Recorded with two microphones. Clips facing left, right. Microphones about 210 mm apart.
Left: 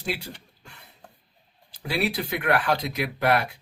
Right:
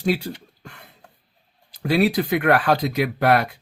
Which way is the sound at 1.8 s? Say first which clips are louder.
Right 8 dB; 55° right (ahead or behind).